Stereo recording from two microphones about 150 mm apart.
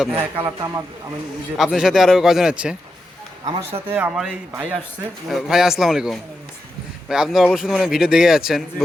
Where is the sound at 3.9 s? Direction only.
10° right (ahead or behind).